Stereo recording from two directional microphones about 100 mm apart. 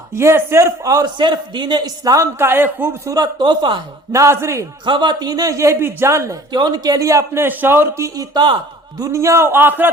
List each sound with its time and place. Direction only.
0.1 s a man's voice: 25° right (ahead or behind)
0.9 s a man's voice: 40° right (ahead or behind)
2.4 s a man's voice: 20° right (ahead or behind)
3.1 s a man's voice: 45° right (ahead or behind)
4.1 s a man's voice: 30° right (ahead or behind)
4.9 s a man's voice: 50° right (ahead or behind); by 6.3 s 30° right (ahead or behind)
6.5 s a man's voice: 45° right (ahead or behind)
9.0 s a man's voice: 30° right (ahead or behind)